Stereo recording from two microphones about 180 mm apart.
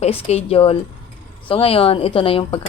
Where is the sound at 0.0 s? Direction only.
35° left (ahead or behind).